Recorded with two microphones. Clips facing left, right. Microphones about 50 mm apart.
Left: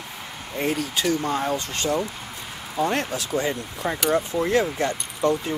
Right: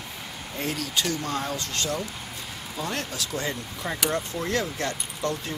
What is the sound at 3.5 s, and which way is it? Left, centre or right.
Speech, centre.